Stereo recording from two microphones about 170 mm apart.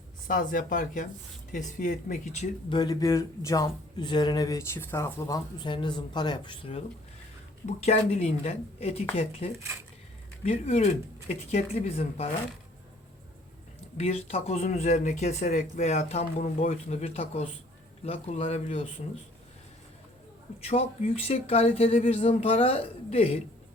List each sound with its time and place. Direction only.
0.3 s speech: 50° left (ahead or behind)
2.6 s speech: 25° left (ahead or behind)
13.9 s speech: 40° left (ahead or behind)
20.6 s speech: 40° left (ahead or behind)